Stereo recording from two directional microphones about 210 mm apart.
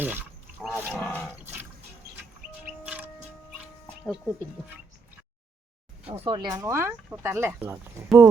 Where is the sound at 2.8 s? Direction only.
5° right (ahead or behind).